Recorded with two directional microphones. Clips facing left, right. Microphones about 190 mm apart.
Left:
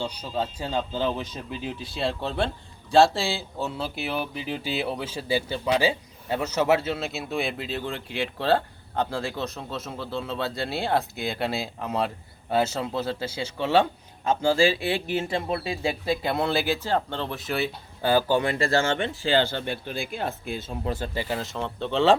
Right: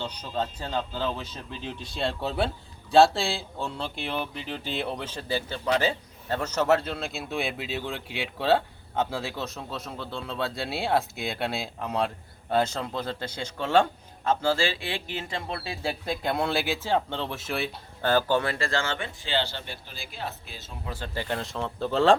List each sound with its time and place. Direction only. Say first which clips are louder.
0.0 s speech: left 2 dB; 10° left (ahead or behind)
18.6 s speech: left 6 dB; 45° left (ahead or behind)
21.0 s speech: left 2 dB; 5° left (ahead or behind)